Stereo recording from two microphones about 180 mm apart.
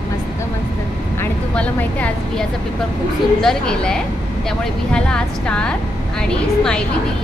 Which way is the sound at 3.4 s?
5° left (ahead or behind).